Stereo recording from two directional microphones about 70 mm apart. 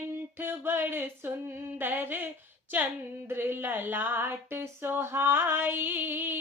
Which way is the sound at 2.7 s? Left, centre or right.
Right.